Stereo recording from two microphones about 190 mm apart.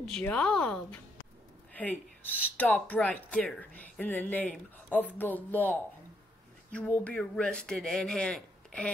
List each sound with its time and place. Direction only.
0.0 s speech: 5° left (ahead or behind)
2.5 s a woman's voice: 10° left (ahead or behind)